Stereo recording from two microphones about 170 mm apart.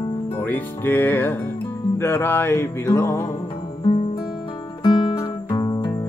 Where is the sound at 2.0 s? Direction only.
15° left (ahead or behind).